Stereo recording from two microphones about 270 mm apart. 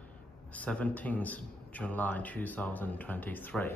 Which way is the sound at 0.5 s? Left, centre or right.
Centre.